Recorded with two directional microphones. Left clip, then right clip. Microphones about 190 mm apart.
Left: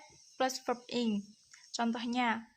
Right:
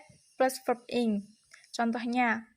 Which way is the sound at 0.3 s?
20° right (ahead or behind).